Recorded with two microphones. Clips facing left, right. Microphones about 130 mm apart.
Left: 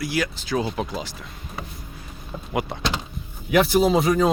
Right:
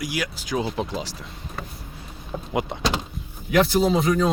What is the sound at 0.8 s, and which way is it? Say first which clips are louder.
Speech: even; 25° right (ahead or behind).